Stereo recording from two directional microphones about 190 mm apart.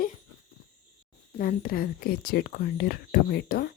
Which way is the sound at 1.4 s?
50° left (ahead or behind).